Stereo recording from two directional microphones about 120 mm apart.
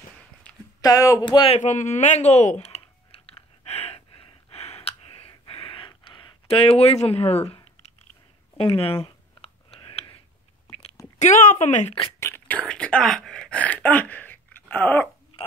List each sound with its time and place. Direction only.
0.7 s speech: 30° left (ahead or behind)
1.2 s a man's voice: 45° left (ahead or behind)
1.6 s typing: 90° left; by 4.0 s 60° left (ahead or behind)
4.1 s a sound: 50° left (ahead or behind)
6.4 s speech: 55° left (ahead or behind)
8.5 s a sound: 50° left (ahead or behind)
11.1 s speech: 90° left
12.2 s speech: 15° left (ahead or behind)